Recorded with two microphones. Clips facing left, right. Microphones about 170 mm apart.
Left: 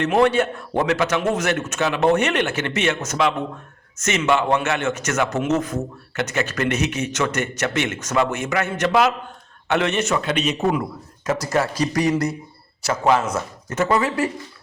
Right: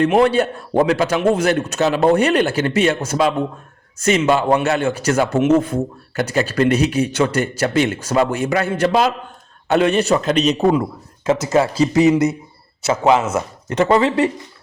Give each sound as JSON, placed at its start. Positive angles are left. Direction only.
{"t": 0.0, "sound": "a man's voice", "side_deg": -30}
{"t": 11.3, "sound": "speech", "side_deg": -25}